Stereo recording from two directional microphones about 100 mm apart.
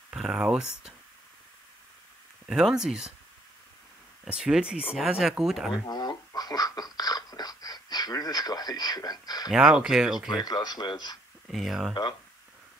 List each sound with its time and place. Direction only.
0.1 s speech: 10° right (ahead or behind)
2.4 s speech: 5° right (ahead or behind)
4.2 s speech: 10° right (ahead or behind)
5.9 s speech: 40° left (ahead or behind)
9.5 s speech: 5° right (ahead or behind)
10.4 s speech: 40° left (ahead or behind)
11.4 s speech: centre (ahead or behind)
11.9 s speech: 55° left (ahead or behind)